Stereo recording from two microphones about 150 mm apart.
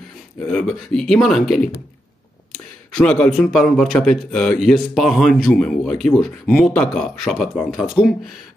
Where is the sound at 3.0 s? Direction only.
5° left (ahead or behind).